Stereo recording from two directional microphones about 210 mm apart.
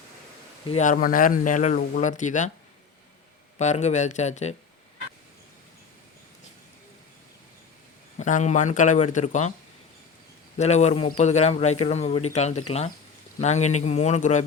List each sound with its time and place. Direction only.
0.7 s speech: 35° left (ahead or behind)
3.6 s speech: 35° left (ahead or behind)
8.2 s speech: 35° left (ahead or behind)
10.6 s speech: 35° left (ahead or behind)